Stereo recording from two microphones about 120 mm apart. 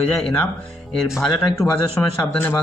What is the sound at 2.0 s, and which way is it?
Speech, 25° left (ahead or behind).